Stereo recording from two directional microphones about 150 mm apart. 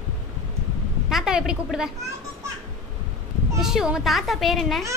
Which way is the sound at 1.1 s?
5° right (ahead or behind).